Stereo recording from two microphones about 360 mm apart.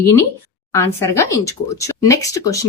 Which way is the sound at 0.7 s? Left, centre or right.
Centre.